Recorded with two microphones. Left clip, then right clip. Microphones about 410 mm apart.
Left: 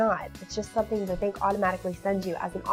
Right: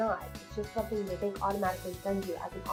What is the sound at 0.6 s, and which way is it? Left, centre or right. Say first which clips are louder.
Speech: left 6 dB; left.